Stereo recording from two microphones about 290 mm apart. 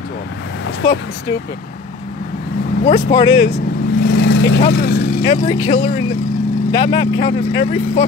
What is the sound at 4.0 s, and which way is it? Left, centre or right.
Vehicle, left.